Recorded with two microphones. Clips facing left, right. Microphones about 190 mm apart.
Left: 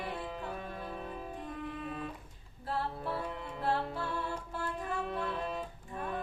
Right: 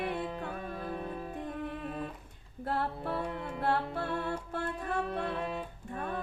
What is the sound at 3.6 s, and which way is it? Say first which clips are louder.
Music: right 2 dB; 60° right (ahead or behind).